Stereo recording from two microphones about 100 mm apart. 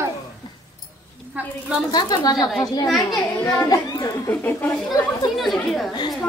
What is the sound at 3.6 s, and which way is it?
Speech, 35° left (ahead or behind).